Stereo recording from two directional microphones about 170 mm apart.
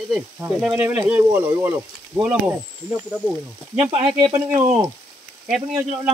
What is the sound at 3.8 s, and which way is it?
Frying, 35° right (ahead or behind).